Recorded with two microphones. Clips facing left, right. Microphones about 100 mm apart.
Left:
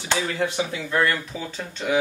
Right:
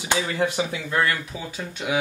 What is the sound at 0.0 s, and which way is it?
Speech, 15° right (ahead or behind).